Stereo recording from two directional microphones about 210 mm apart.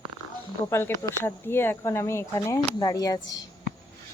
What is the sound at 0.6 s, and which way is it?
Speech, 10° left (ahead or behind).